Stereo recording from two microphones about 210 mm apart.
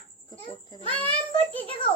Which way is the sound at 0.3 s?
20° left (ahead or behind).